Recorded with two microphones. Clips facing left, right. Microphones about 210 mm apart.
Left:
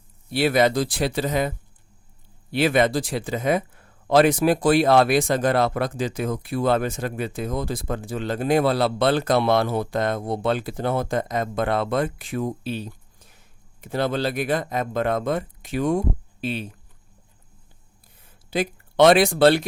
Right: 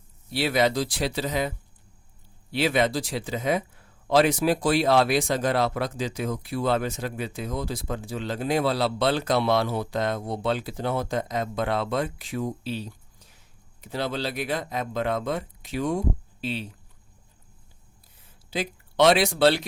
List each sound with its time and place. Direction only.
0.3 s speech: 55° left (ahead or behind)
18.5 s speech: 50° left (ahead or behind)